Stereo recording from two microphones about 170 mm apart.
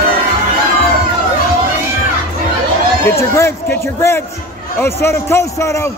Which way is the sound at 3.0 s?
15° left (ahead or behind).